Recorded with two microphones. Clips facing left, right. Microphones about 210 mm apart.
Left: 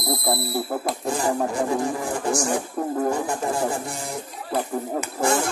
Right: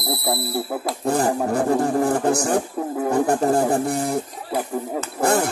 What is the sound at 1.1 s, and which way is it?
Speech, 60° right (ahead or behind).